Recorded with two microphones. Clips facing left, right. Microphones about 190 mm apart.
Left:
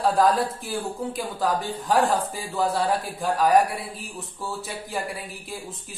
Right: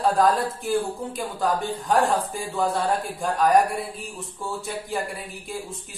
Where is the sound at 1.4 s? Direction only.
Centre (ahead or behind).